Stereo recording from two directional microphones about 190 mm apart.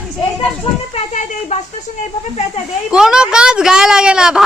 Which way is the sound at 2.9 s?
5° right (ahead or behind).